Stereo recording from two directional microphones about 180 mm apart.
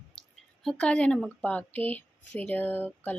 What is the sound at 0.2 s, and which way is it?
Speech, 5° left (ahead or behind).